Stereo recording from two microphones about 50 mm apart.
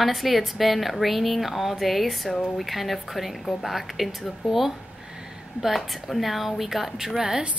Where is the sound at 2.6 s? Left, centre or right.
Centre.